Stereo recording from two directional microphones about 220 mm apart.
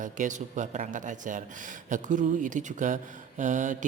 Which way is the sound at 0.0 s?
35° right (ahead or behind).